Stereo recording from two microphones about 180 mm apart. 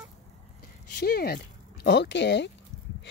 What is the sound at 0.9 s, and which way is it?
Speech, 60° left (ahead or behind).